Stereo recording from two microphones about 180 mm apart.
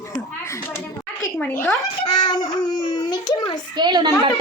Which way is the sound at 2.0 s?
25° left (ahead or behind).